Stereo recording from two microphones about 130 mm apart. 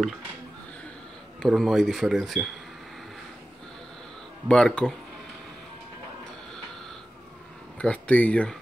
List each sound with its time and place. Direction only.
1.4 s speech: centre (ahead or behind)
4.5 s speech: 5° left (ahead or behind)
7.8 s speech: 10° left (ahead or behind)